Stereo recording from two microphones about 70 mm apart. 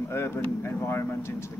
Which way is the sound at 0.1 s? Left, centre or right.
Left.